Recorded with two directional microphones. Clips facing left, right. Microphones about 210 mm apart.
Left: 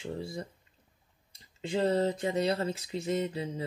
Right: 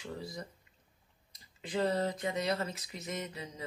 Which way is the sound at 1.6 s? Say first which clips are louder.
Left 4 dB; 30° left (ahead or behind).